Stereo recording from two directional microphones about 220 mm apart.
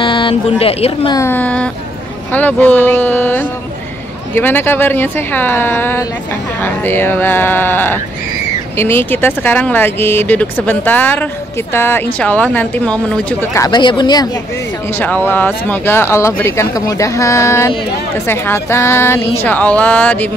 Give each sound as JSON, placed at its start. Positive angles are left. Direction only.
{"t": 0.0, "sound": "speech", "side_deg": 20}
{"t": 1.2, "sound": "speech", "side_deg": 10}
{"t": 15.0, "sound": "speech", "side_deg": 10}